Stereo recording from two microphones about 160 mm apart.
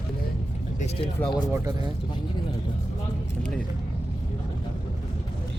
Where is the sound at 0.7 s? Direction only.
40° left (ahead or behind).